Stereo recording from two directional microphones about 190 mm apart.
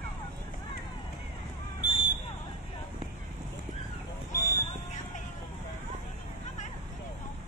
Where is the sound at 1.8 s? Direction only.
25° left (ahead or behind).